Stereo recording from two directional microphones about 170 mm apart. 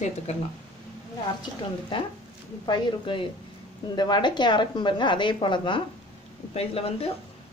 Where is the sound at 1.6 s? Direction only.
30° left (ahead or behind).